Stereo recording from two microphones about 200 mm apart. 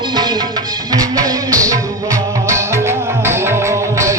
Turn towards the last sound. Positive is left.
turn(degrees=-15)  # may be behind; listen again after turning